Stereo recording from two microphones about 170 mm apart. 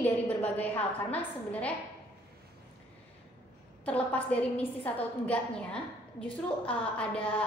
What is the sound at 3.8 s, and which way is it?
A woman's voice, 10° left (ahead or behind).